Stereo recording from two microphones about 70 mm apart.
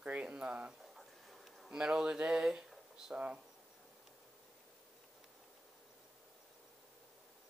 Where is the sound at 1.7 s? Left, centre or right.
Centre.